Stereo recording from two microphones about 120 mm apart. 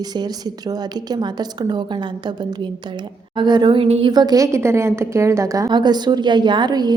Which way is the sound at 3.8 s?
60° right (ahead or behind).